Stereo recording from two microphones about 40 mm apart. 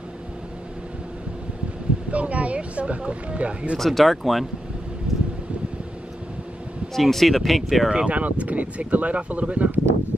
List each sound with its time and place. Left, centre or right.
2.0 s speech: right
3.7 s speech: centre
5.1 s a sound: centre
6.9 s speech: centre
7.9 s speech: right
8.2 s speech: right